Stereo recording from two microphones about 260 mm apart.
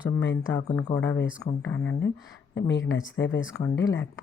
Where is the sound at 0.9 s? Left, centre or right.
Centre.